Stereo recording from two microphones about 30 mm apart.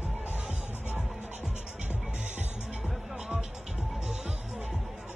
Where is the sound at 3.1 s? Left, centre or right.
Right.